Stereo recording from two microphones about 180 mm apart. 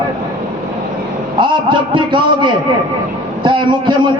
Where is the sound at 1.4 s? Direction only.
25° right (ahead or behind).